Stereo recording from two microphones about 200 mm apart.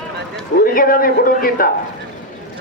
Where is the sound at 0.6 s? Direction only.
45° left (ahead or behind).